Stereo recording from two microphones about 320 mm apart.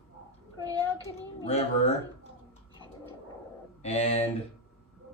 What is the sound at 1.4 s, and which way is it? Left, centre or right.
Speech, centre.